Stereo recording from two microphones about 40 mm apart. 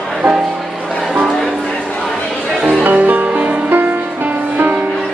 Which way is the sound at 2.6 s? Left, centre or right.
Right.